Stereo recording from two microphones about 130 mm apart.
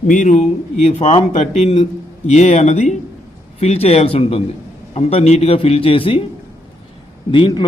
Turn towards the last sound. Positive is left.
turn(degrees=35)  # may be behind; listen again after turning